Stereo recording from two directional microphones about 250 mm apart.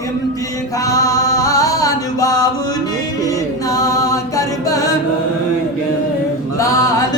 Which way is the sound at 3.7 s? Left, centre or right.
Centre.